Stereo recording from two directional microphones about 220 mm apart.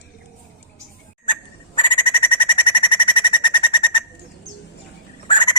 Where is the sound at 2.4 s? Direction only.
20° left (ahead or behind).